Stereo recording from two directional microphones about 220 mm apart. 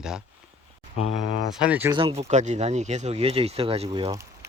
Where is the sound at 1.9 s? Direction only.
25° right (ahead or behind).